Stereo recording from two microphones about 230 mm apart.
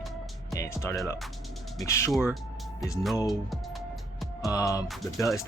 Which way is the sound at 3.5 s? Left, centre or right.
Centre.